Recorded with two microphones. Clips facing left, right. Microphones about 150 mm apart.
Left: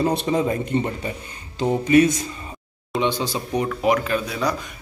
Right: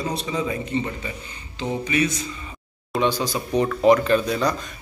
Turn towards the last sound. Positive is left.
turn(degrees=5)  # may be behind; listen again after turning